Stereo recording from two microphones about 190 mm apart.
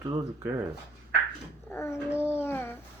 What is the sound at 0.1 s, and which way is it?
Speech, 10° right (ahead or behind).